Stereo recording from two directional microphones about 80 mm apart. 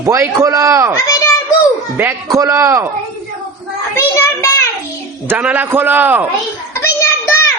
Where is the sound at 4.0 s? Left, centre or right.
Left.